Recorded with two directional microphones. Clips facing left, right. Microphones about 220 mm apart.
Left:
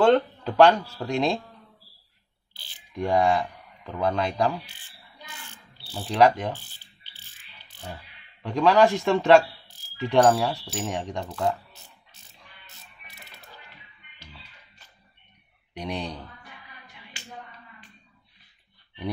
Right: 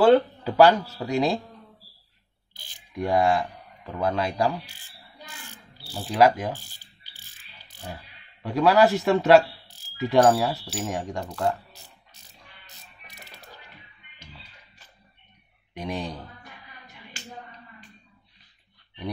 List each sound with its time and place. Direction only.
0.0 s speech: 5° right (ahead or behind)
3.0 s speech: centre (ahead or behind)
5.9 s speech: 5° right (ahead or behind)
7.9 s speech: 5° right (ahead or behind)
15.7 s speech: centre (ahead or behind)
17.1 s a sound: 40° right (ahead or behind)